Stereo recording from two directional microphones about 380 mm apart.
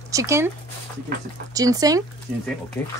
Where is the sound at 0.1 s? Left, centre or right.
Centre.